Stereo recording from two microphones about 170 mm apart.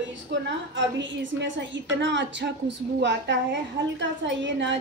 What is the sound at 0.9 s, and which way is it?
A woman's voice, 90° right.